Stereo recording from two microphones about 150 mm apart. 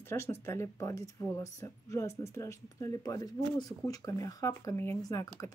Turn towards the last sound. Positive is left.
turn(degrees=25)  # may be behind; listen again after turning